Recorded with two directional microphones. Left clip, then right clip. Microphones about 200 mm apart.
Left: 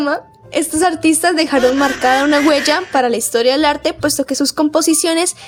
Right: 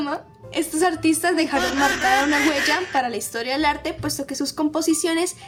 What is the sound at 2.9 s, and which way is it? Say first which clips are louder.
A woman's voice: left 9 dB; 40° left (ahead or behind).